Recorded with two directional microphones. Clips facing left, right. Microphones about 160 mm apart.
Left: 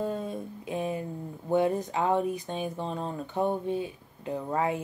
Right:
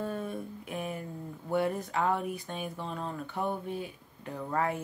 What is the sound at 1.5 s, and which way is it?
Speech, 20° left (ahead or behind).